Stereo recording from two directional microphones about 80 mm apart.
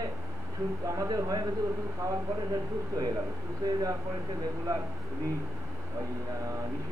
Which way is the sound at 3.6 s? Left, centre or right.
Right.